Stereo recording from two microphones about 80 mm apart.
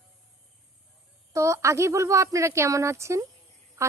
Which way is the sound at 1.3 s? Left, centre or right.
Right.